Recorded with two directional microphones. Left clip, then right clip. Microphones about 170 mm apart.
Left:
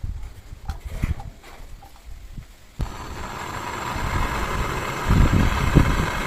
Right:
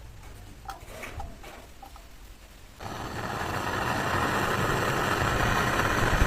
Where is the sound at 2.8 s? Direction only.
20° right (ahead or behind).